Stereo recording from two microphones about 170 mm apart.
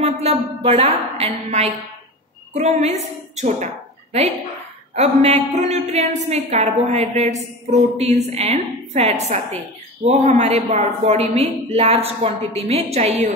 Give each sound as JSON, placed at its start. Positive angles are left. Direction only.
{"t": 0.0, "sound": "a woman's voice", "side_deg": -35}
{"t": 4.9, "sound": "a woman's voice", "side_deg": -40}